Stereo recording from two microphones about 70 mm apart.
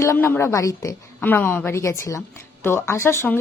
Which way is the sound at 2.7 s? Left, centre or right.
Left.